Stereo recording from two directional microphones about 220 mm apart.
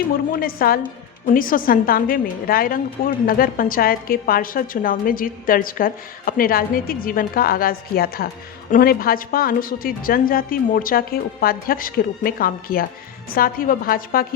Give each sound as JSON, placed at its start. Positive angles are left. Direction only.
{"t": 0.3, "sound": "a woman's voice", "side_deg": 40}